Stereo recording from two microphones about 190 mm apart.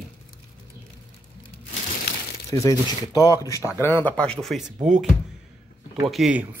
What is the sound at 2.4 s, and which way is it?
Speech, 15° left (ahead or behind).